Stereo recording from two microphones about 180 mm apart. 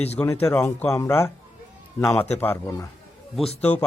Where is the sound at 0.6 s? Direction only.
10° left (ahead or behind).